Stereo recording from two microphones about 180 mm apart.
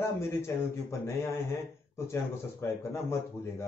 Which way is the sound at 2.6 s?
15° left (ahead or behind).